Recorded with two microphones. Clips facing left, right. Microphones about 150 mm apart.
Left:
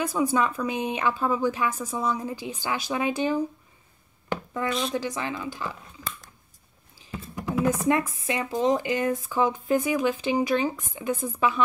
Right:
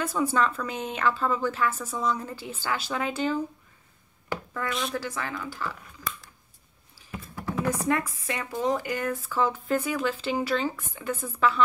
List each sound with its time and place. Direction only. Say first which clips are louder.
0.0 s a woman's voice: left 1 dB; 15° left (ahead or behind)
4.6 s a woman's voice: left 3 dB; 30° left (ahead or behind)
4.9 s speech: left 3 dB; 20° left (ahead or behind)
7.0 s music: left 3 dB; 20° left (ahead or behind)
7.4 s computer keyboard: left 4 dB; 15° left (ahead or behind)
8.3 s a woman's voice: left 4 dB; 20° left (ahead or behind)